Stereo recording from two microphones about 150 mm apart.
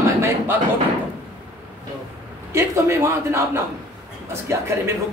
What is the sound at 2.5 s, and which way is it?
A man's voice, 15° right (ahead or behind).